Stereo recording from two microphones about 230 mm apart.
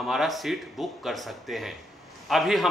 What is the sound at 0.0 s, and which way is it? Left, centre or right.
A man's voice, centre.